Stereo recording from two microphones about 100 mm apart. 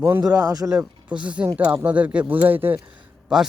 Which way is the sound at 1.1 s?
10° right (ahead or behind).